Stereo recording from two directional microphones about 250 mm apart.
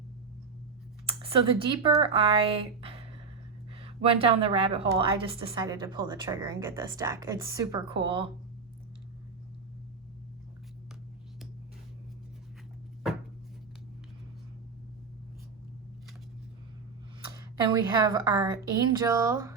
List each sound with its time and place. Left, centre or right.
1.0 s a woman's voice: right
17.6 s a woman's voice: centre